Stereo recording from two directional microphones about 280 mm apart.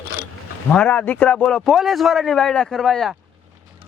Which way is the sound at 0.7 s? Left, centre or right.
Centre.